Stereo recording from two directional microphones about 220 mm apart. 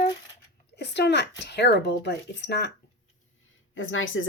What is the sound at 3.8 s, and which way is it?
Speech, 65° left (ahead or behind).